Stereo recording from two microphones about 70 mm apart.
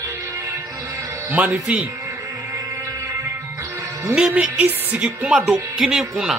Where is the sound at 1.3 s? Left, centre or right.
Right.